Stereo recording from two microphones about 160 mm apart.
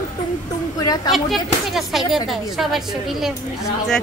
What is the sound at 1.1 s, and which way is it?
Speech, centre (ahead or behind).